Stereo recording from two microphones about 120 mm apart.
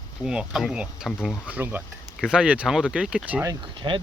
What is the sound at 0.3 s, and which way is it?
Speech, 5° right (ahead or behind).